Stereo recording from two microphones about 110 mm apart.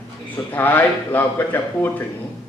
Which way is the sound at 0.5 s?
15° left (ahead or behind).